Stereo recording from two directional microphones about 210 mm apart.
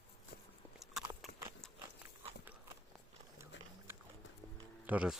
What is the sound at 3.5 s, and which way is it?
Boat, 55° left (ahead or behind).